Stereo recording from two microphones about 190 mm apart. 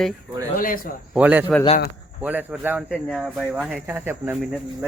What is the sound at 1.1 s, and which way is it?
Speech, 10° right (ahead or behind).